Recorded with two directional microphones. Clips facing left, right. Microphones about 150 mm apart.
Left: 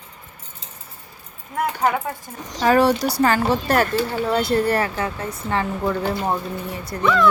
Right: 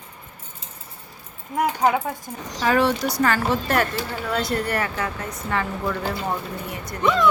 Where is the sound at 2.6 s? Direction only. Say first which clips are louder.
Left 4 dB; 40° left (ahead or behind).